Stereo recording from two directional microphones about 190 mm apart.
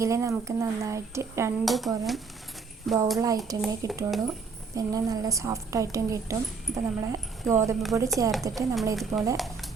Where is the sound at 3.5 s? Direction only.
20° right (ahead or behind).